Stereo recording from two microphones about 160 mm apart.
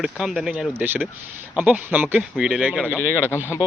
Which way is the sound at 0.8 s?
10° right (ahead or behind).